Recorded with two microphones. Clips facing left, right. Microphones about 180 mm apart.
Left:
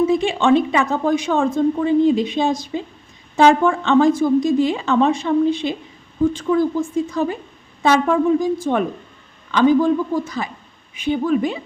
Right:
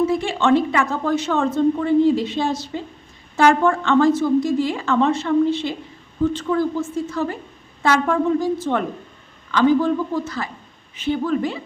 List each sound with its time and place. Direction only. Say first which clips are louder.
0.0 s speech: left 2 dB; 20° left (ahead or behind)